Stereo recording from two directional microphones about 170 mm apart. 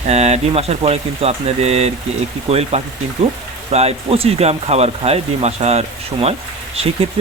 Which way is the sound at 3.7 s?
40° right (ahead or behind).